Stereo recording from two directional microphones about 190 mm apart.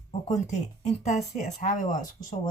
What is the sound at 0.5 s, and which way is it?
Speech, 35° left (ahead or behind).